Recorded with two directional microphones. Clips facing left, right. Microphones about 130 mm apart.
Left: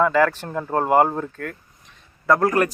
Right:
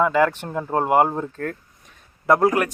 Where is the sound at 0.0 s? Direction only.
15° right (ahead or behind).